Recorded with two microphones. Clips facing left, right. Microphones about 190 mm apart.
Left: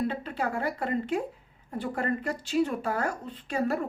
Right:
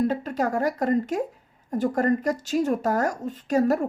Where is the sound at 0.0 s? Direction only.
40° right (ahead or behind).